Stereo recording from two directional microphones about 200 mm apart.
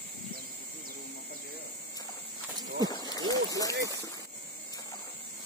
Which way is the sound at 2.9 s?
20° left (ahead or behind).